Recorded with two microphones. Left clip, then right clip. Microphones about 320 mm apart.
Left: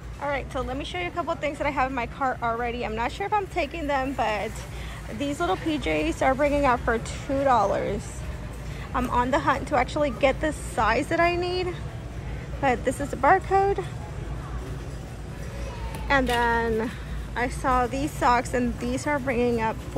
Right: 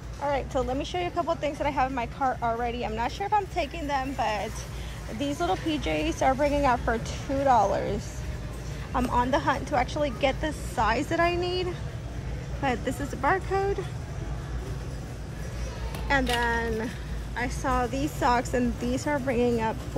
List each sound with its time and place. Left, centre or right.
0.2 s speech: centre
5.9 s speech: right
6.2 s speech: centre
16.1 s speech: centre